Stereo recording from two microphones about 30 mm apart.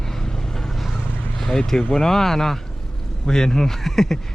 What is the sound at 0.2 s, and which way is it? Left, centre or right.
Vehicle, centre.